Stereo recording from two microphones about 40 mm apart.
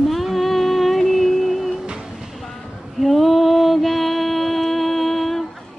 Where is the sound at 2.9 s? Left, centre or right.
Centre.